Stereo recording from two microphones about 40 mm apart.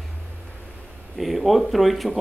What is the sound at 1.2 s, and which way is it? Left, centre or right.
A man's voice, centre.